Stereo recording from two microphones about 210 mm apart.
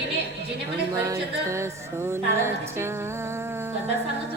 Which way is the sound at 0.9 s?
15° right (ahead or behind).